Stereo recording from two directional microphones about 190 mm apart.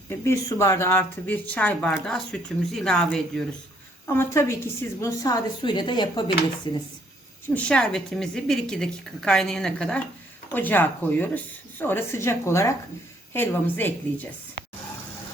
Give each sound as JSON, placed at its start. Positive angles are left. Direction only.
{"t": 0.1, "sound": "speech", "side_deg": 15}
{"t": 4.0, "sound": "a woman's voice", "side_deg": 15}
{"t": 7.5, "sound": "a woman's voice", "side_deg": 5}